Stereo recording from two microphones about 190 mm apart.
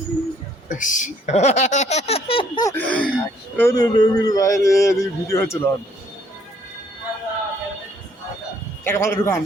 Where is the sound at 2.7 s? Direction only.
5° left (ahead or behind).